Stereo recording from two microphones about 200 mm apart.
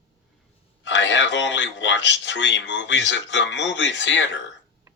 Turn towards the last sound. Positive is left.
turn(degrees=65)  # may be behind; listen again after turning